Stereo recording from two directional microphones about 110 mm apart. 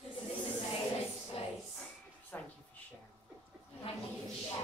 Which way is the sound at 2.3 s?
15° left (ahead or behind).